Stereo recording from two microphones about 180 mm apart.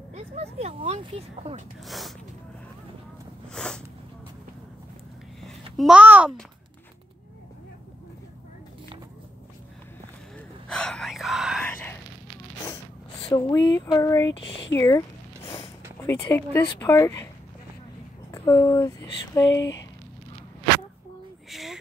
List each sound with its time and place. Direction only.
0.1 s speech: 35° right (ahead or behind)
1.9 s speech: centre (ahead or behind)
3.5 s speech: 5° left (ahead or behind)
5.4 s a sound: centre (ahead or behind)
10.7 s whispering: 5° left (ahead or behind)
13.4 s speech: 20° left (ahead or behind)
16.1 s speech: 10° left (ahead or behind)
18.3 s a sound: 15° left (ahead or behind)
21.5 s a sound: centre (ahead or behind)